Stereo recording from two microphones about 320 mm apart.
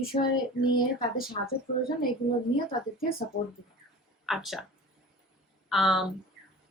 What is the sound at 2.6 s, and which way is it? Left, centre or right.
Speech, left.